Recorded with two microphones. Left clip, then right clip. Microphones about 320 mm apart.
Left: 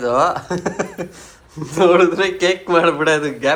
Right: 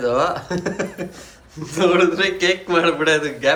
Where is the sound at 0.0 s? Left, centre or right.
Centre.